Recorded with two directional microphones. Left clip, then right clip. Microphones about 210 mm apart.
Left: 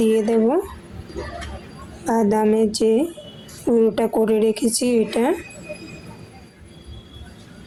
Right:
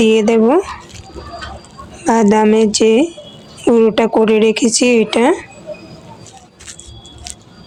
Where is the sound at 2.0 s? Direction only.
20° right (ahead or behind).